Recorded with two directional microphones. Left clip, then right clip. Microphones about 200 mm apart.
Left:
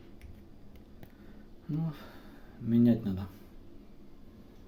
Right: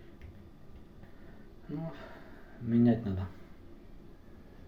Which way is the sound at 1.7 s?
45° left (ahead or behind).